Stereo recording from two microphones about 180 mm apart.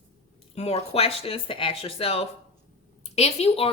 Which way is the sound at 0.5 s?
35° left (ahead or behind).